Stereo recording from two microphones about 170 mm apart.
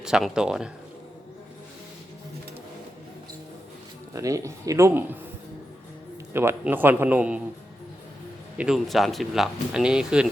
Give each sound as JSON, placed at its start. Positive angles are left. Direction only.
{"t": 0.0, "sound": "speech", "side_deg": -5}
{"t": 4.1, "sound": "speech", "side_deg": -20}
{"t": 6.3, "sound": "a man's voice", "side_deg": -15}
{"t": 8.5, "sound": "speech", "side_deg": -5}